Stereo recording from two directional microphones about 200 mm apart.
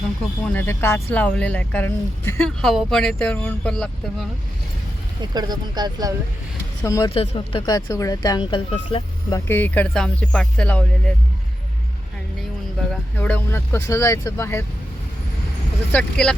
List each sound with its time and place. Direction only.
0.4 s speech: 10° left (ahead or behind)
5.3 s speech: 20° right (ahead or behind)
6.8 s speech: 15° left (ahead or behind)
7.1 s speech: 30° left (ahead or behind)
9.5 s speech: 10° left (ahead or behind)
12.9 s speech: 5° left (ahead or behind)
15.9 s speech: 5° left (ahead or behind)